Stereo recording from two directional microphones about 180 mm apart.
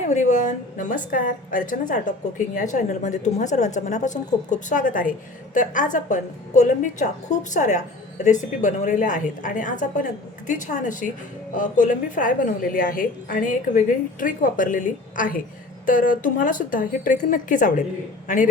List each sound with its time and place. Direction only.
0.1 s a woman's voice: 40° left (ahead or behind)